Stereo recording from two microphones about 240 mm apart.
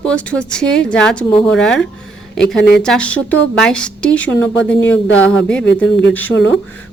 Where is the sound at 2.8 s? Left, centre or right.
Centre.